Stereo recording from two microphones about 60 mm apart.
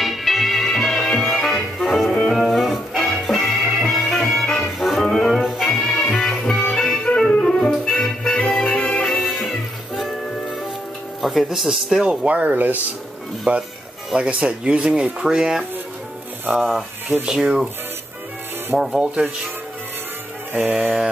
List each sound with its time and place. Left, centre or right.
0.0 s music: centre
2.0 s music: centre
2.3 s music: centre
4.7 s music: centre
9.1 s music: centre
11.1 s speech: centre
12.1 s speech: centre
17.3 s speech: centre
18.8 s speech: centre
20.5 s speech: right